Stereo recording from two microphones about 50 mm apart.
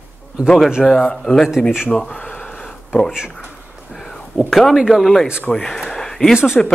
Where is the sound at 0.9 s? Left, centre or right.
Left.